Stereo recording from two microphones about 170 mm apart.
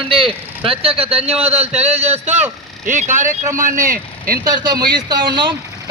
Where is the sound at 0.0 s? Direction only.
30° right (ahead or behind); by 3.8 s 50° right (ahead or behind).